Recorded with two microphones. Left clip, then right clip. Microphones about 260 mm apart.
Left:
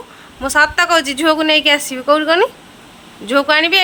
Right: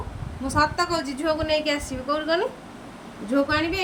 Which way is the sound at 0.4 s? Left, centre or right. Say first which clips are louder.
Left 10 dB; centre.